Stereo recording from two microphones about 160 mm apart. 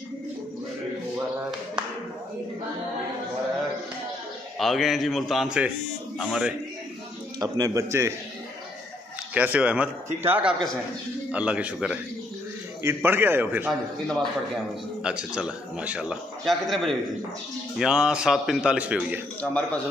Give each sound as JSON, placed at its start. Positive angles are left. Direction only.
{"t": 4.6, "sound": "a man's voice", "side_deg": 0}
{"t": 7.3, "sound": "speech", "side_deg": -20}
{"t": 9.3, "sound": "a man's voice", "side_deg": -10}
{"t": 13.7, "sound": "a man's voice", "side_deg": 0}
{"t": 19.4, "sound": "speech", "side_deg": 10}